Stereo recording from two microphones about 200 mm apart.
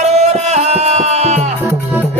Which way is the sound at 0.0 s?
35° right (ahead or behind).